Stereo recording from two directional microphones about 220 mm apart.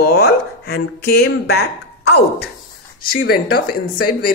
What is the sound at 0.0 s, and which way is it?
Speech, 45° left (ahead or behind).